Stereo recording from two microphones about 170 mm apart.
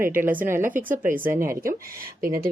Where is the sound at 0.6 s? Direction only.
50° right (ahead or behind).